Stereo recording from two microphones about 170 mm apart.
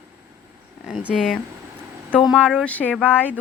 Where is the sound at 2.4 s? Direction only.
5° left (ahead or behind).